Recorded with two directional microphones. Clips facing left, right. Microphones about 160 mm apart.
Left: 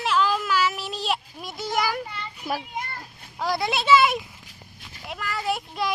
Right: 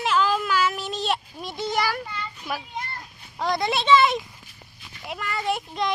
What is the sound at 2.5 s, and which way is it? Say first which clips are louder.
Speech: left 3 dB; 35° left (ahead or behind).